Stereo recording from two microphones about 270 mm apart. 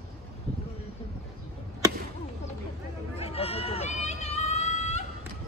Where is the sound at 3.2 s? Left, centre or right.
Left.